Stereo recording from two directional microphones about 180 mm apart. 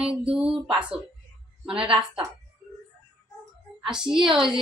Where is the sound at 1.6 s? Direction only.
5° right (ahead or behind).